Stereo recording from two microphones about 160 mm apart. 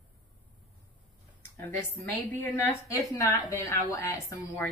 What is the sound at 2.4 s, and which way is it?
A woman's voice, 15° left (ahead or behind).